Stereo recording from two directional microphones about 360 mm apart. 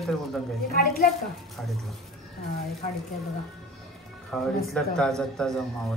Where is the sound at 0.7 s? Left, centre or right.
Left.